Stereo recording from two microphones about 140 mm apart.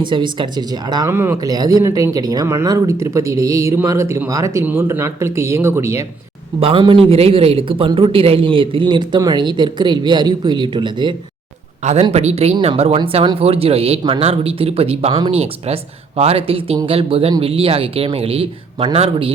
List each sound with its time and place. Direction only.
0.0 s a man's voice: 35° right (ahead or behind)
1.1 s speech: 15° right (ahead or behind)
6.6 s a man's voice: 40° right (ahead or behind)
12.1 s speech: 50° right (ahead or behind)